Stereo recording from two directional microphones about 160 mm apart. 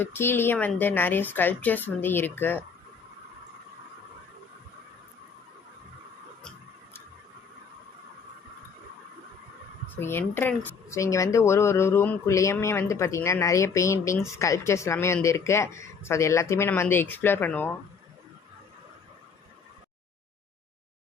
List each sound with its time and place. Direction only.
0.0 s speech: 15° left (ahead or behind)
10.0 s speech: 15° left (ahead or behind)